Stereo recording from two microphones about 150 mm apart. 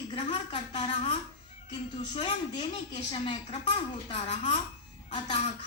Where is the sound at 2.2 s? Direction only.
40° left (ahead or behind).